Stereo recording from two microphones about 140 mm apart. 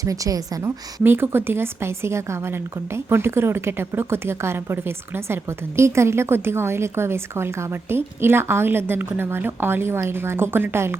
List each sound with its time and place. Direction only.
0.0 s a woman's voice: 25° right (ahead or behind)